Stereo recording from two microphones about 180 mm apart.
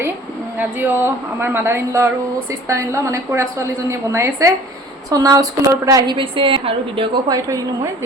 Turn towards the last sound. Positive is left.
turn(degrees=-20)  # may be behind; listen again after turning